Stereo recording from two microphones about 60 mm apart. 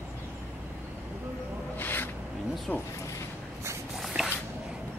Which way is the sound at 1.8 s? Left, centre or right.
Left.